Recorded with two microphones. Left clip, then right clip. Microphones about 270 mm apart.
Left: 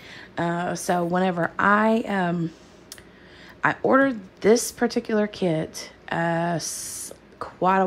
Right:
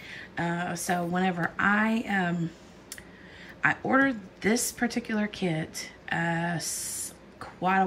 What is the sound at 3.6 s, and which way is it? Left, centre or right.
A woman's voice, centre.